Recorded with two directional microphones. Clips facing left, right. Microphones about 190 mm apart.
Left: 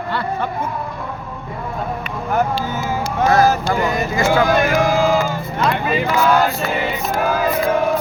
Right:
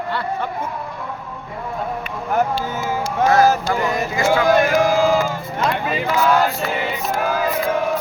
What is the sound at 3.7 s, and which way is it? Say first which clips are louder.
Speech: left 2 dB; 40° left (ahead or behind).